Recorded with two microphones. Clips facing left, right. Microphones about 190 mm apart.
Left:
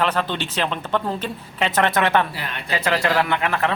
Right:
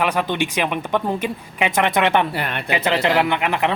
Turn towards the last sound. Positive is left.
turn(degrees=-20)  # may be behind; listen again after turning